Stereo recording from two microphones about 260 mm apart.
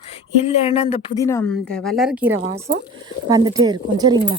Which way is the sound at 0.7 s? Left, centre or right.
Left.